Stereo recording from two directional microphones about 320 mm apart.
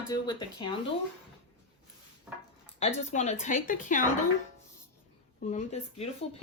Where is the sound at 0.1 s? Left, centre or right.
Centre.